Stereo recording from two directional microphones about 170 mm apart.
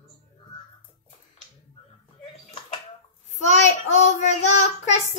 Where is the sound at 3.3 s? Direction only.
45° left (ahead or behind).